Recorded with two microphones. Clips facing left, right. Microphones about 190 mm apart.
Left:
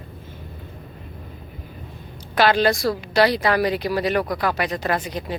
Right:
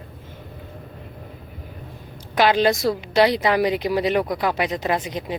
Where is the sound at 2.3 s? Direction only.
15° right (ahead or behind).